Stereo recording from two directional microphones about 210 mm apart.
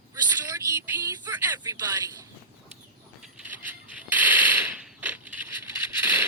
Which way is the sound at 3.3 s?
10° right (ahead or behind).